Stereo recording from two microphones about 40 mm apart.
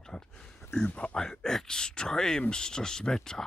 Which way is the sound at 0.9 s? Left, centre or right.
Left.